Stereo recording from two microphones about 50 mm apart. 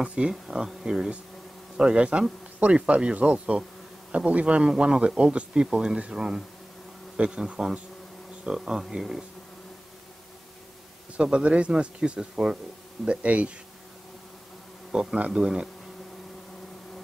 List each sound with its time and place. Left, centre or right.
0.0 s speech: centre
11.1 s speech: centre
14.9 s speech: centre
15.1 s speech: right
15.4 s speech: centre